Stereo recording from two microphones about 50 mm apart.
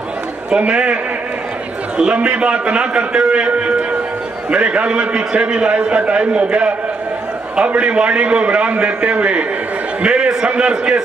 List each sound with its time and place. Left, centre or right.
0.6 s a man's voice: right
2.0 s a man's voice: centre